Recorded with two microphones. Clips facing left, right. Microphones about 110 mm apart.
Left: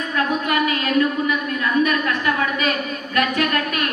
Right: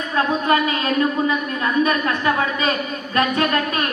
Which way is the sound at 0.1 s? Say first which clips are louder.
Right 3 dB; 30° right (ahead or behind).